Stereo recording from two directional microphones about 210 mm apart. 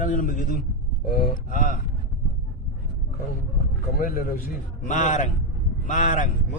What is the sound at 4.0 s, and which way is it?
Mantra, 45° left (ahead or behind).